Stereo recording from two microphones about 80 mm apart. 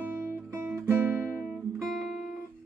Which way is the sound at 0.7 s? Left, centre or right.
Right.